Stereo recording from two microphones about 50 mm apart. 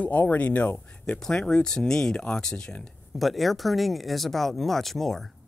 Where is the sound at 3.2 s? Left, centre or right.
Centre.